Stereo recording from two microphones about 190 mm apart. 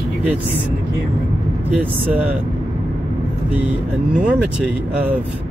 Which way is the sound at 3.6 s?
5° right (ahead or behind).